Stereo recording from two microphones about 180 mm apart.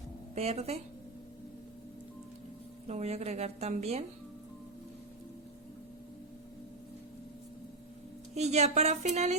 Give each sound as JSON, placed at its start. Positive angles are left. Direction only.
{"t": 0.3, "sound": "a woman's voice", "side_deg": -35}
{"t": 2.8, "sound": "a woman's voice", "side_deg": -35}
{"t": 8.4, "sound": "a woman's voice", "side_deg": -40}